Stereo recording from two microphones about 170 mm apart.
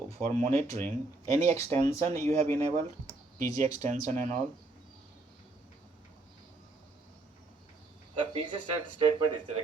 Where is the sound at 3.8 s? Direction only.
45° right (ahead or behind).